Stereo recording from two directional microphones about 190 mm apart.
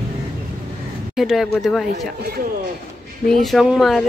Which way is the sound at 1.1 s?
Centre (ahead or behind).